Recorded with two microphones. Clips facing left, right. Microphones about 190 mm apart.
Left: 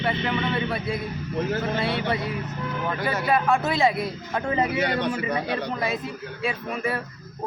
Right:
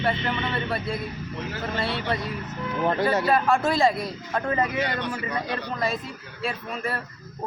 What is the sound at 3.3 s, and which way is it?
Speech, centre (ahead or behind).